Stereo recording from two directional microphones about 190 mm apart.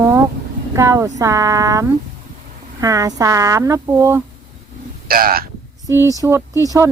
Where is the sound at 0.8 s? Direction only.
15° right (ahead or behind).